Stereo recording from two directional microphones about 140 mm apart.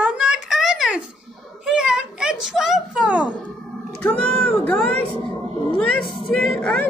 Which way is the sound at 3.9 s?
10° left (ahead or behind).